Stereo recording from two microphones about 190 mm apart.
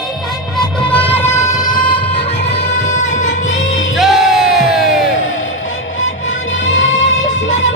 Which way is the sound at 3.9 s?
Centre (ahead or behind).